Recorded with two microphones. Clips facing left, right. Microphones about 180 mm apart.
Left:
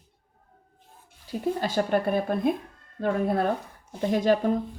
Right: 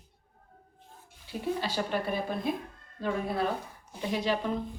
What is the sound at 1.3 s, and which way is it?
A woman's voice, 40° left (ahead or behind).